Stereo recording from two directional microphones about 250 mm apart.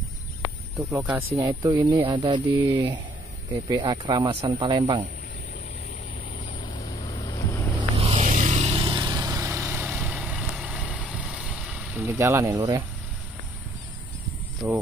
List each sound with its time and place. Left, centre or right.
0.9 s speech: centre
6.6 s vehicle: centre
8.0 s vehicle: right
14.6 s speech: centre